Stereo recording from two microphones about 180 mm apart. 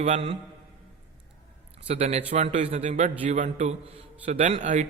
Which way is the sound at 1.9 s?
35° right (ahead or behind).